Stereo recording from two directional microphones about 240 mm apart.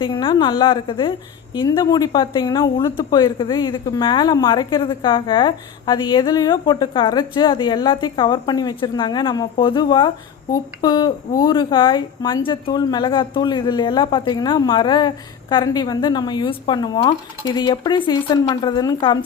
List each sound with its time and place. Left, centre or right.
0.0 s a woman's voice: left